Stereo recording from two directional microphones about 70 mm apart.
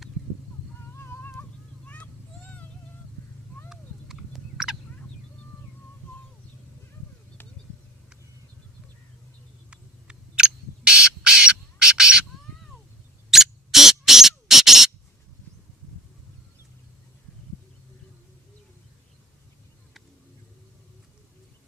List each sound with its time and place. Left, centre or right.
0.9 s cat: left
3.7 s a sound: centre
7.4 s bird: left
9.6 s owl: centre
13.3 s rodents: centre